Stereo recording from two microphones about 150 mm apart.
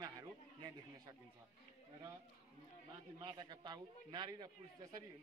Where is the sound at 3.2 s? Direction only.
30° right (ahead or behind).